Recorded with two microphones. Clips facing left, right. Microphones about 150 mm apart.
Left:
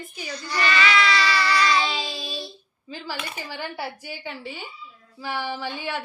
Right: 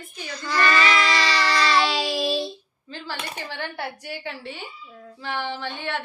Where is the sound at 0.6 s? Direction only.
45° right (ahead or behind).